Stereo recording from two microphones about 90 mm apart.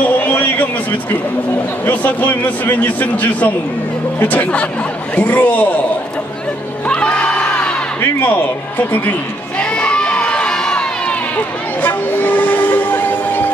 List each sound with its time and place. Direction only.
0.2 s a sound: 20° left (ahead or behind)
1.9 s a man's voice: 20° left (ahead or behind)
6.9 s crowd: 10° left (ahead or behind)
8.7 s a man's voice: 20° left (ahead or behind)
9.6 s crowd: 10° left (ahead or behind)
11.8 s train: 20° left (ahead or behind)